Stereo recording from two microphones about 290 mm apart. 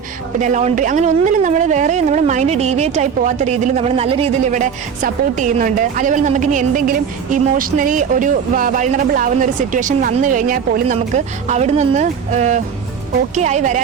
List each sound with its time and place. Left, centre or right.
0.3 s speech: right